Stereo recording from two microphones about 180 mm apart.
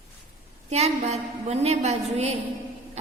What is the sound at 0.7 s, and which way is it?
A woman's voice, 35° right (ahead or behind).